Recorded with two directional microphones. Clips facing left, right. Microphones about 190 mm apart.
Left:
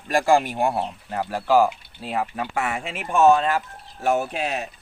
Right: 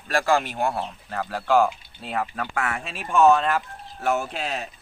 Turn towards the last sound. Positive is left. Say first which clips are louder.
# left 3 dB
turn(degrees=15)  # may be behind; listen again after turning